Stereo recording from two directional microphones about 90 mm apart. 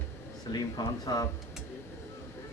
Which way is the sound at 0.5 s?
45° left (ahead or behind).